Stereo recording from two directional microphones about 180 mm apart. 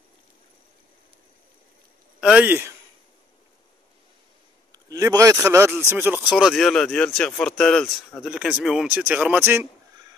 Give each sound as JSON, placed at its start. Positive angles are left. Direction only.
{"t": 2.1, "sound": "a man's voice", "side_deg": -5}
{"t": 4.7, "sound": "speech", "side_deg": -20}
{"t": 6.2, "sound": "speech", "side_deg": 0}